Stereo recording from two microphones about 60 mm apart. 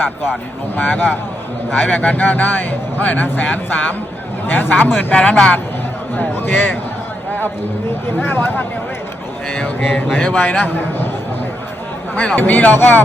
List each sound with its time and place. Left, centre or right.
0.8 s speech: left
5.1 s speech: centre
6.1 s speech: left
8.0 s speech: left
9.5 s speech: left
9.8 s a sound: centre
10.2 s speech: left
12.1 s speech: left